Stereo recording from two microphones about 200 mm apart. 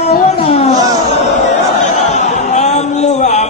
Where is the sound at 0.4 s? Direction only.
30° left (ahead or behind).